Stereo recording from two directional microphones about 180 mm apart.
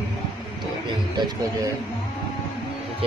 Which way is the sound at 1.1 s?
20° right (ahead or behind).